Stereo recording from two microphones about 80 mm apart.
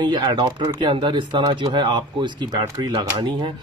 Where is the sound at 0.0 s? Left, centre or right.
Right.